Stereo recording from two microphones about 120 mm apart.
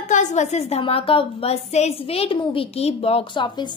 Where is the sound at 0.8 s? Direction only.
50° left (ahead or behind).